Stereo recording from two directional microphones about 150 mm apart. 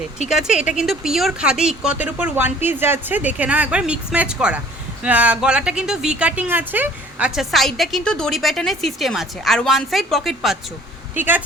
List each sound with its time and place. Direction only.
0.3 s speech: 5° right (ahead or behind)
11.1 s speech: 15° right (ahead or behind)